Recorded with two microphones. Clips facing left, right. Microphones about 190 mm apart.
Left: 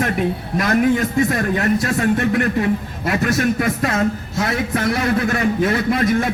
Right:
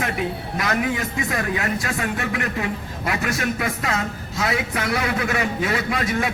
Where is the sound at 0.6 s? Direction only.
45° left (ahead or behind).